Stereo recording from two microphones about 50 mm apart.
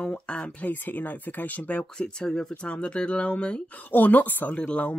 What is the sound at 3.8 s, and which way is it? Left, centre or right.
Speech, left.